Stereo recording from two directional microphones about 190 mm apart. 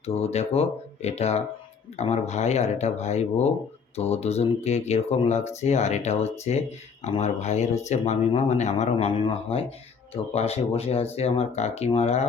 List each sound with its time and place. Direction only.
0.0 s speech: 35° left (ahead or behind)